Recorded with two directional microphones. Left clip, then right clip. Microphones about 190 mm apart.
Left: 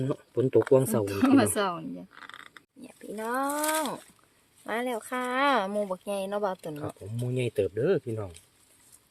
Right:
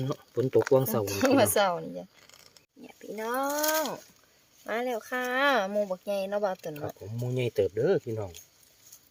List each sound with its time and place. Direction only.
0.0 s speech: centre (ahead or behind)
1.0 s speech: 25° right (ahead or behind)
2.6 s speech: 25° left (ahead or behind)
7.2 s speech: 5° left (ahead or behind)